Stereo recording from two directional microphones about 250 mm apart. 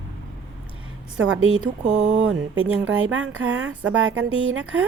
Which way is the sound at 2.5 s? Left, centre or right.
Right.